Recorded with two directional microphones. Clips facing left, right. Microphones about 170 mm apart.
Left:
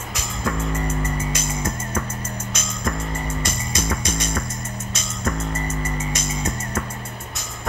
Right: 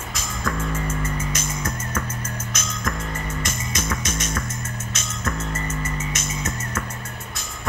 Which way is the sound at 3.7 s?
35° left (ahead or behind).